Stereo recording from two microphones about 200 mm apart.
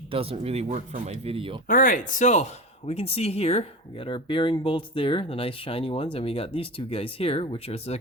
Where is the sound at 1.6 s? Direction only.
40° left (ahead or behind).